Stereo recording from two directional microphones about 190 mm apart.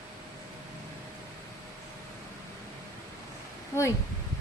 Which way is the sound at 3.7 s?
15° left (ahead or behind).